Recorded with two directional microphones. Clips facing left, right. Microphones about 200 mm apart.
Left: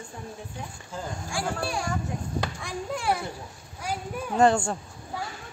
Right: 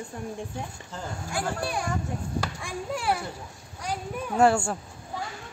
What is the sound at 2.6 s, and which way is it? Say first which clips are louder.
A man's voice: even; 5° right (ahead or behind).